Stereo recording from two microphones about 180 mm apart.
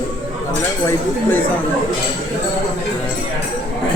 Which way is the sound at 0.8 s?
10° left (ahead or behind).